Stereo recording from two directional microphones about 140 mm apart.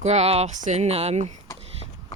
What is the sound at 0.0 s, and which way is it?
Speech, 50° right (ahead or behind).